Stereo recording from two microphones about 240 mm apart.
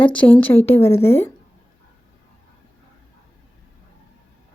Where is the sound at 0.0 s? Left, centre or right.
Centre.